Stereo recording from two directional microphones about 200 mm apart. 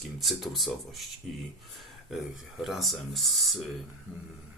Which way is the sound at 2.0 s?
Centre (ahead or behind).